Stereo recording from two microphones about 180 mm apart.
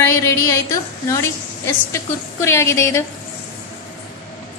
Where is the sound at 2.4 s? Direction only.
15° left (ahead or behind).